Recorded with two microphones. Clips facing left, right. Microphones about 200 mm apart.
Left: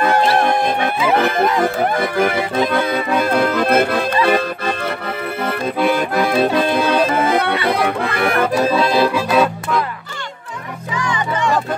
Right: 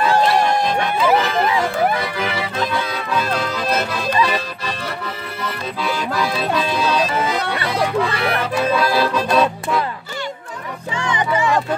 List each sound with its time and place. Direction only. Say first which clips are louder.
0.0 s music: left 1 dB; 55° left (ahead or behind)
2.0 s accordion: left 6 dB; 50° left (ahead or behind)
7.6 s music: left 1 dB; 55° left (ahead or behind); by 8.7 s 40° left (ahead or behind)
8.7 s accordion: left 3 dB; 20° left (ahead or behind)
9.3 s music: left 1 dB; 5° left (ahead or behind)
10.9 s music: even; 25° right (ahead or behind)
11.3 s music: even; 5° right (ahead or behind)